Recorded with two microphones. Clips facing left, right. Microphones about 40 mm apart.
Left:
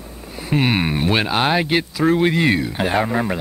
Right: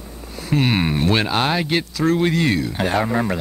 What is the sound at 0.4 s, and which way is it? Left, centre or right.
Speech, centre.